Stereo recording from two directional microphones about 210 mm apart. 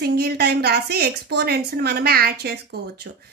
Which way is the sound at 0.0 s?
50° right (ahead or behind).